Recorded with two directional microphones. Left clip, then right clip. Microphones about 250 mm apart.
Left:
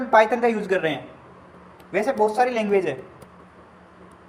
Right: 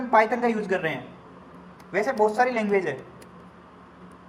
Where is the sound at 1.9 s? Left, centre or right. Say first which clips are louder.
Left 2 dB; centre.